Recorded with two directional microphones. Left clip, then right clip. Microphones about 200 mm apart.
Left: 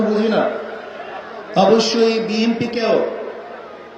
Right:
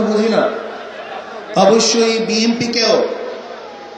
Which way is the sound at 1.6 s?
40° left (ahead or behind).